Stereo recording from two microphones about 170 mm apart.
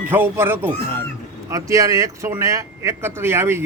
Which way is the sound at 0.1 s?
10° right (ahead or behind).